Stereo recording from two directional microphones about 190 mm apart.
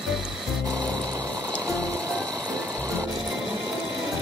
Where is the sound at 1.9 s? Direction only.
5° left (ahead or behind).